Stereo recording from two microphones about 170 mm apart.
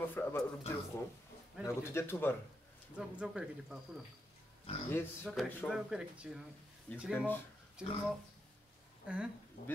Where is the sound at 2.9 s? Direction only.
5° right (ahead or behind).